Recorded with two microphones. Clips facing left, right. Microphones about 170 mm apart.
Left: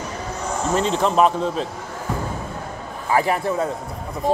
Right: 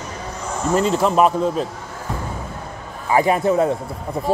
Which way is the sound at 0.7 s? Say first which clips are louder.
Right 2 dB; 5° right (ahead or behind).